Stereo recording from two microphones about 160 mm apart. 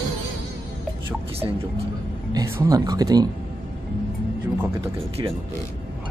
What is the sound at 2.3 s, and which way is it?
Speech, 25° right (ahead or behind).